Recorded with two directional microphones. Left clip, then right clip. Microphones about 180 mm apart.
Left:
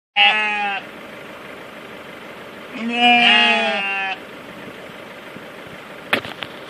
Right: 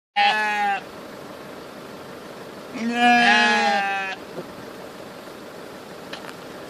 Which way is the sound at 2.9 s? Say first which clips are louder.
Left 3 dB; 5° left (ahead or behind).